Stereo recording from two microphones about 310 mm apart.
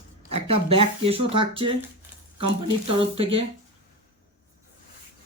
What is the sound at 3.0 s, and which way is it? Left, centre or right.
Speech, centre.